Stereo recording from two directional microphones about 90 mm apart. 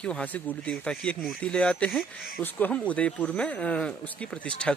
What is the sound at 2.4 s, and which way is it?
Speech, 20° left (ahead or behind).